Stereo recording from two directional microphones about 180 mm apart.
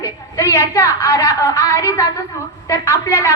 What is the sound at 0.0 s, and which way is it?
A woman's voice, 15° left (ahead or behind).